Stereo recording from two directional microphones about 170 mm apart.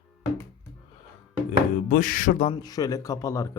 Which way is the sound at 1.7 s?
55° left (ahead or behind).